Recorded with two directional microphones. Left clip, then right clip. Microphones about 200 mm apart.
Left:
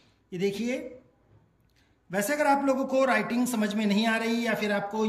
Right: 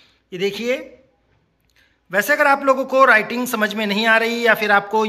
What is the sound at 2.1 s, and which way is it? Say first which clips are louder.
A man's voice: right 9 dB; 5° left (ahead or behind).